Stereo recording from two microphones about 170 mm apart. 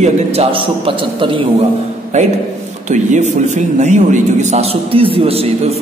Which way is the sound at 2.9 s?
45° right (ahead or behind).